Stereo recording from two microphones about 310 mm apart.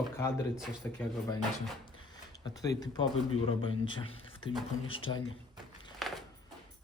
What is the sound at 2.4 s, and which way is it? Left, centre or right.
Speech, centre.